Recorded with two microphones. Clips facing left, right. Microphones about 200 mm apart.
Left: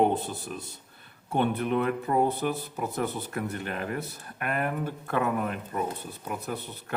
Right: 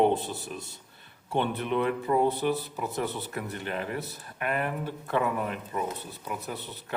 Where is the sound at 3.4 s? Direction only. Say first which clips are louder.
Left 2 dB; 45° left (ahead or behind).